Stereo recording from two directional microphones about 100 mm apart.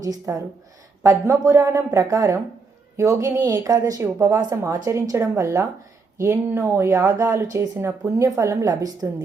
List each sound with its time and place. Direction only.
0.0 s speech: 35° right (ahead or behind)